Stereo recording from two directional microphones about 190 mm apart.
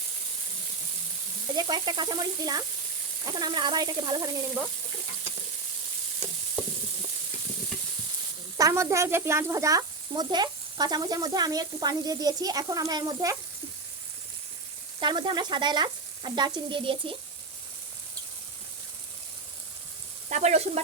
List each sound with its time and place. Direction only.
1.5 s speech: 20° right (ahead or behind)
8.5 s speech: 15° right (ahead or behind)
15.0 s speech: 25° right (ahead or behind)
20.3 s frying: 35° right (ahead or behind)